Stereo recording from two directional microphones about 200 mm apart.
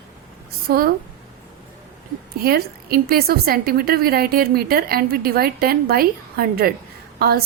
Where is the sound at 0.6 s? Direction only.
50° right (ahead or behind).